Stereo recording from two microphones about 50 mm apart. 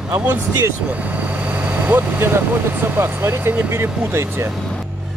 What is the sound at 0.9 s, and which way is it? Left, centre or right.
Vehicle, right.